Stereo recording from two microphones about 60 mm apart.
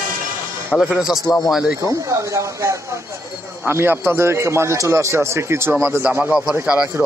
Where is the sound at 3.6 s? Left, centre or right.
Right.